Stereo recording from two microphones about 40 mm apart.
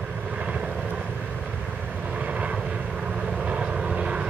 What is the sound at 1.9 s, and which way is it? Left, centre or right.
Vehicle, right.